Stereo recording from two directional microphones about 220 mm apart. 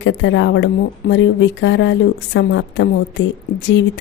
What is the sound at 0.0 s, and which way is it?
Speech, 55° left (ahead or behind).